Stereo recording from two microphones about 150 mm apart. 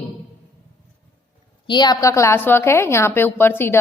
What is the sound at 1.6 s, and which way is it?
A woman's voice, 30° left (ahead or behind).